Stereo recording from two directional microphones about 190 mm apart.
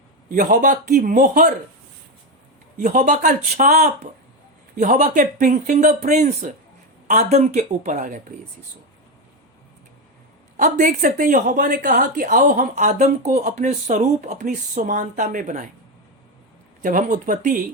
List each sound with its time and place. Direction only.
0.3 s speech: 40° right (ahead or behind)
2.7 s speech: 40° right (ahead or behind)
10.6 s speech: 45° right (ahead or behind)
16.8 s speech: 45° right (ahead or behind)